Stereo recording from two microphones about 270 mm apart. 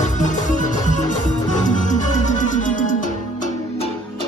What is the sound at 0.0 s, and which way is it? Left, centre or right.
Music, left.